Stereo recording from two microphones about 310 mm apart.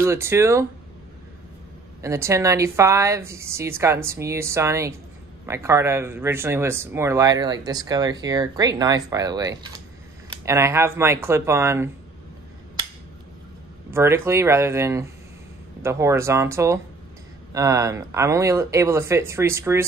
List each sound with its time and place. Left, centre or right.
0.0 s speech: centre
2.0 s speech: centre
13.8 s speech: centre